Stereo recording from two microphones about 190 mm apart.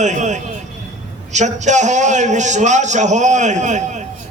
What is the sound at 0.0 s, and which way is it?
A man's voice, 40° right (ahead or behind).